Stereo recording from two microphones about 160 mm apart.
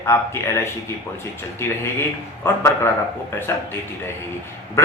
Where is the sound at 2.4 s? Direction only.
15° left (ahead or behind).